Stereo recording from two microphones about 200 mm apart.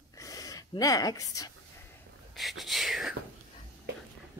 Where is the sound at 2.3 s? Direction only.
Centre (ahead or behind).